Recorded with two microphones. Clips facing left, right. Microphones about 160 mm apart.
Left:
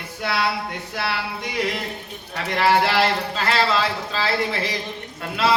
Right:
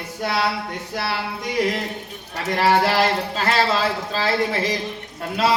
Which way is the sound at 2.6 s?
40° right (ahead or behind).